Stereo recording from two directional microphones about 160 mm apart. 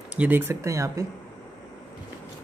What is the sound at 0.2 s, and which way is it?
Speech, 15° right (ahead or behind).